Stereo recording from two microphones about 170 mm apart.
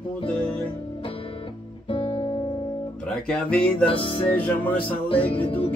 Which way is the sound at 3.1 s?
5° left (ahead or behind).